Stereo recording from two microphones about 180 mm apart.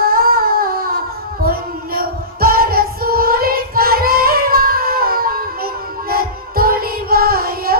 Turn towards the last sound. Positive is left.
turn(degrees=-55)  # may be behind; listen again after turning